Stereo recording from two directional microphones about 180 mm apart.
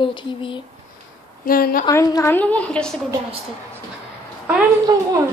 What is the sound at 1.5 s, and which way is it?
Speech, 55° left (ahead or behind).